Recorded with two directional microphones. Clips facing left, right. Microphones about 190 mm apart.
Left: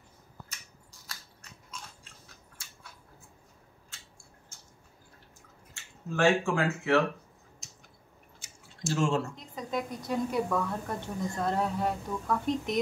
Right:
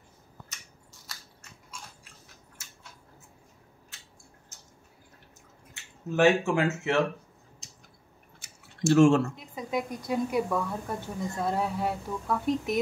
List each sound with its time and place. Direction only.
5.8 s speech: 20° right (ahead or behind)
8.4 s a sound: 65° right (ahead or behind)
9.4 s a woman's voice: 10° right (ahead or behind)